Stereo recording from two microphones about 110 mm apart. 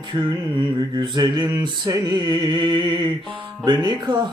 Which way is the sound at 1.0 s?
40° right (ahead or behind).